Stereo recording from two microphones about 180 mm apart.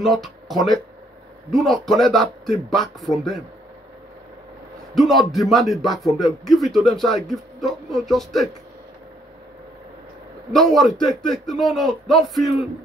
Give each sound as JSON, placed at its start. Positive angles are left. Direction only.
{"t": 0.0, "sound": "speech", "side_deg": 0}
{"t": 4.9, "sound": "speech", "side_deg": 0}
{"t": 10.5, "sound": "speech", "side_deg": 0}